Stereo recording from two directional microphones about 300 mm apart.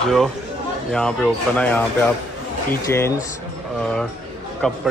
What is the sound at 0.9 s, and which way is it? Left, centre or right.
A man's voice, centre.